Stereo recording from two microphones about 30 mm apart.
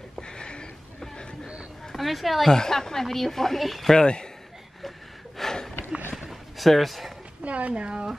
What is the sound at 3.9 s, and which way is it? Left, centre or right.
Speech, left.